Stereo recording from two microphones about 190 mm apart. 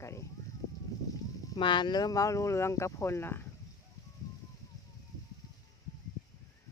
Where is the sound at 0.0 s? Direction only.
15° left (ahead or behind).